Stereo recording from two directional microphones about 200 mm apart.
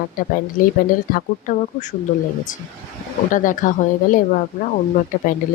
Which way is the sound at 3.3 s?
40° left (ahead or behind).